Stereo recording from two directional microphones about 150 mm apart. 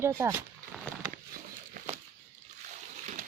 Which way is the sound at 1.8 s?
55° right (ahead or behind).